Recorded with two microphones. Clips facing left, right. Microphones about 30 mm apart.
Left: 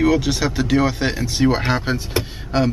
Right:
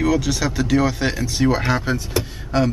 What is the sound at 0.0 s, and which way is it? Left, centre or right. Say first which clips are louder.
A man's voice: left 2 dB; centre.